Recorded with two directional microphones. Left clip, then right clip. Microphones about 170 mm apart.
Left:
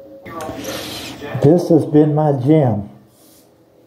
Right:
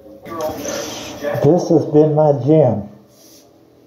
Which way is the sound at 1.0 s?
40° left (ahead or behind).